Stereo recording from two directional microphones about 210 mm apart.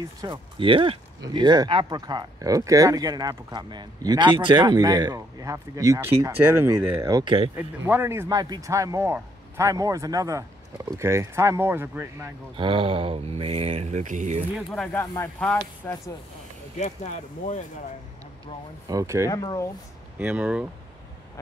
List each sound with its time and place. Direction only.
0.2 s speech: 25° right (ahead or behind)
7.5 s speech: 10° right (ahead or behind)
12.5 s speech: 25° right (ahead or behind)
14.7 s speech: 5° left (ahead or behind)
16.7 s speech: 35° left (ahead or behind)
18.9 s speech: 15° right (ahead or behind)
19.2 s speech: 15° left (ahead or behind)
20.2 s speech: 5° right (ahead or behind)